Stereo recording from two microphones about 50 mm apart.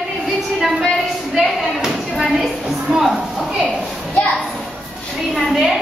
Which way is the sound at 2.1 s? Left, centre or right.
Centre.